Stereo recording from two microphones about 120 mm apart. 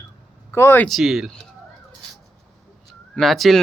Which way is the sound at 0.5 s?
20° left (ahead or behind).